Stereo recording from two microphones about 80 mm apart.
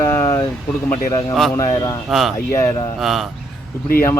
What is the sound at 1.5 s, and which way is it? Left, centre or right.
Speech, left.